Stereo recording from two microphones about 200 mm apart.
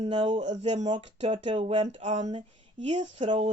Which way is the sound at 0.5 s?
35° right (ahead or behind).